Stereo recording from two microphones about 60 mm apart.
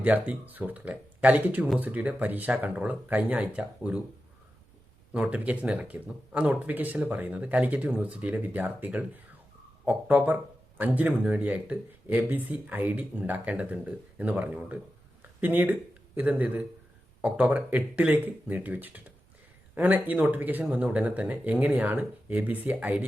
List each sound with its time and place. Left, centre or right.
0.0 s speech: right
5.1 s speech: right
10.8 s speech: right